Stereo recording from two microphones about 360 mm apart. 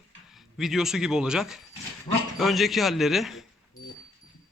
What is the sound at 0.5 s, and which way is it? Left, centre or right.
A man's voice, centre.